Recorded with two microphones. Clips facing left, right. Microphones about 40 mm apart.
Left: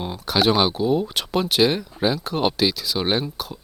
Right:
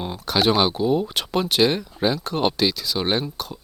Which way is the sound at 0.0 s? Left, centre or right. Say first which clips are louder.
Left 1 dB; centre.